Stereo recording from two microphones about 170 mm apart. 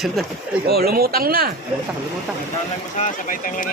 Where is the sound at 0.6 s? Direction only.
65° right (ahead or behind).